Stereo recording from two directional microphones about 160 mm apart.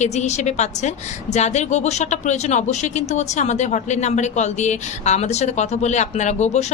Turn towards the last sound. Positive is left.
turn(degrees=45)  # may be behind; listen again after turning